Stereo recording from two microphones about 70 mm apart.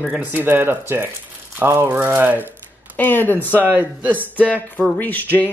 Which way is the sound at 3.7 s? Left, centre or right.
Right.